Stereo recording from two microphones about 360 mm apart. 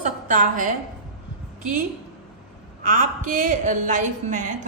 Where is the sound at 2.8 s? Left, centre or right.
Right.